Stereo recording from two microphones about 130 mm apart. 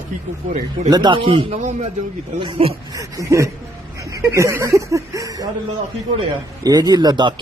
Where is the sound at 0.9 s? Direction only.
35° right (ahead or behind).